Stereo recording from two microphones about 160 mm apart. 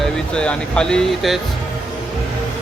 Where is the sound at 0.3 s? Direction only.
5° left (ahead or behind).